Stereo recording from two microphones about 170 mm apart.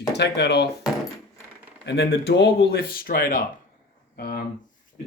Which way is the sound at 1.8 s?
90° left.